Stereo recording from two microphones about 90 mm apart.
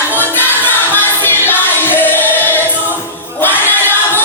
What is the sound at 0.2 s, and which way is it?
Music, 20° left (ahead or behind).